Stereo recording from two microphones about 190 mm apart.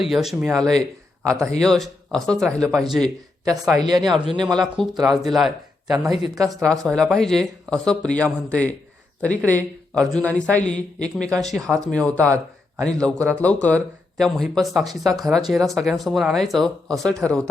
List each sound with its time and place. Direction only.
0.0 s speech: centre (ahead or behind)
3.4 s speech: 20° right (ahead or behind)
4.0 s speech: centre (ahead or behind)
6.4 s speech: 20° right (ahead or behind)
6.7 s speech: 5° left (ahead or behind)